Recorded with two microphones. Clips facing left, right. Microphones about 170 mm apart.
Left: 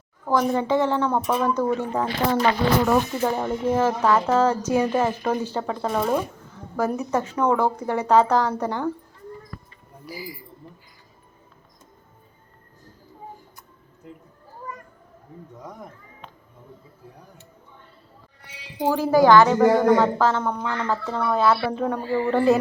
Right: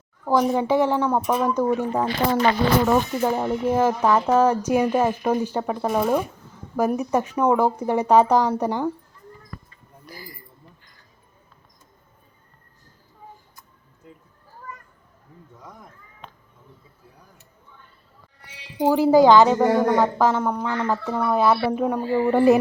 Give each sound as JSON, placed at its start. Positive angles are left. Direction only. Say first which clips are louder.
{"t": 0.3, "sound": "a woman's voice", "louder": "right 1 dB", "side_deg": -10}
{"t": 10.1, "sound": "speech", "louder": "left 6 dB", "side_deg": 10}
{"t": 18.8, "sound": "a woman's voice", "louder": "right 3 dB", "side_deg": -15}